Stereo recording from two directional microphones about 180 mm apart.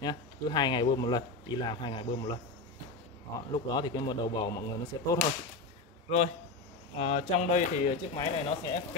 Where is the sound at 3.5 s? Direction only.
25° left (ahead or behind).